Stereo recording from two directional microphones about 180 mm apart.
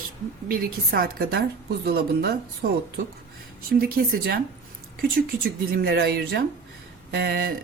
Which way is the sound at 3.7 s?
55° right (ahead or behind).